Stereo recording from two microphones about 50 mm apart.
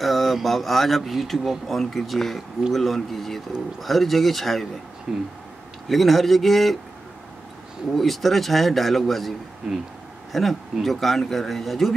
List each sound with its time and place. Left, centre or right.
0.0 s speech: centre
5.1 s speech: centre
5.9 s speech: centre
7.9 s speech: centre